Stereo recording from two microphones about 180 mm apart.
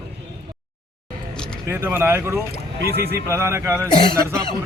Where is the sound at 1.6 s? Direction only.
15° right (ahead or behind).